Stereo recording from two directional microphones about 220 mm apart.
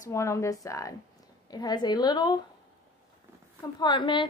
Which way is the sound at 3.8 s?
20° left (ahead or behind).